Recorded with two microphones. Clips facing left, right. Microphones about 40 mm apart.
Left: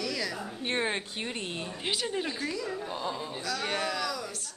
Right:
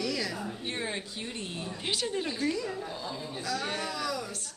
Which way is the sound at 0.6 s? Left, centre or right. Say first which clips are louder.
Left 8 dB; left.